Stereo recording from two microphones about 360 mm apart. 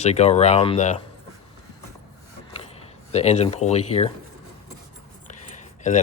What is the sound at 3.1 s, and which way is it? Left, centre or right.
Speech, centre.